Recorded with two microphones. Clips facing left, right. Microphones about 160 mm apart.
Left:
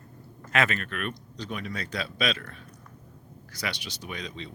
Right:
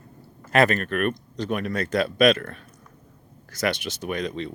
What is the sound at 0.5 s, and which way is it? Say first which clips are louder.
Speech: right 7 dB; 40° right (ahead or behind).